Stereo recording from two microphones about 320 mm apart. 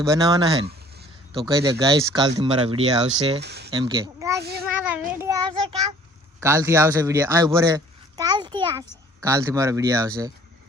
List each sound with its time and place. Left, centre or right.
0.0 s speech: centre
3.4 s speech: right
3.7 s a child's voice: centre
6.4 s speech: centre